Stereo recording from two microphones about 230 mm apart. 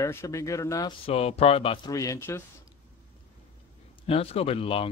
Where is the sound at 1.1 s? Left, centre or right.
Left.